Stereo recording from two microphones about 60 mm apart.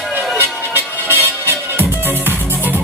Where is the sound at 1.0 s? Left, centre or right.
Right.